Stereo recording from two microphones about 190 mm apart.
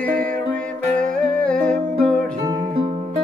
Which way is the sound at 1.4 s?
5° left (ahead or behind).